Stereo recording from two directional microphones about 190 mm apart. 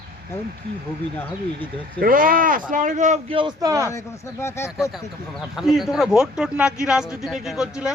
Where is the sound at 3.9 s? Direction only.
15° left (ahead or behind).